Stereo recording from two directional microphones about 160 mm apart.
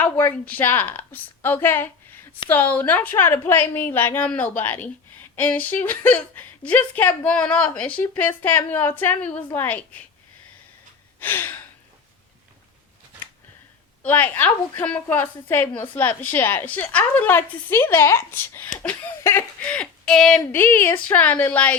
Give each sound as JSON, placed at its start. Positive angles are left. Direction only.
{"t": 0.0, "sound": "a woman's voice", "side_deg": 10}
{"t": 11.2, "sound": "a woman's voice", "side_deg": 10}
{"t": 14.0, "sound": "a woman's voice", "side_deg": 10}